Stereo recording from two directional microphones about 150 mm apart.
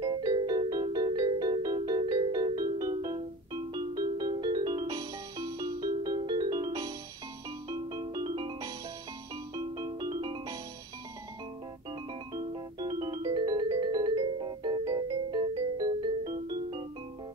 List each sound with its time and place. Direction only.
0.0 s music: 30° right (ahead or behind)
9.6 s music: 30° right (ahead or behind)
12.4 s music: 25° right (ahead or behind)